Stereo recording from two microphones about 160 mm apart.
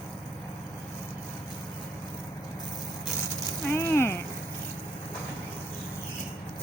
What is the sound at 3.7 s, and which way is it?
Speech, 15° left (ahead or behind).